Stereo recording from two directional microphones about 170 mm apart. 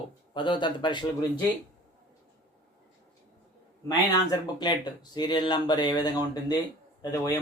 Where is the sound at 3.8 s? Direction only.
25° left (ahead or behind).